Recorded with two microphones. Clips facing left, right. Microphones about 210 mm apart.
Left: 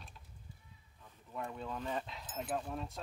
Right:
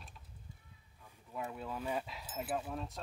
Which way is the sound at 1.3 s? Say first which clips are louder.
Even; 5° right (ahead or behind).